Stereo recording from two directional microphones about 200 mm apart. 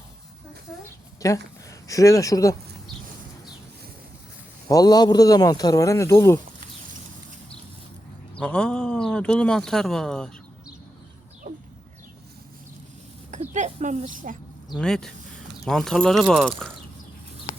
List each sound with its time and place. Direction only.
1.2 s speech: 15° left (ahead or behind)
4.7 s speech: 20° left (ahead or behind)
8.4 s speech: 5° left (ahead or behind)
11.5 s a sound: 35° right (ahead or behind)
13.3 s speech: 35° right (ahead or behind)
14.8 s speech: 5° left (ahead or behind)